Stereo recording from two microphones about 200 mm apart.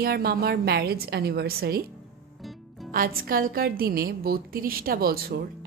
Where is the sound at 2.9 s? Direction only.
45° right (ahead or behind).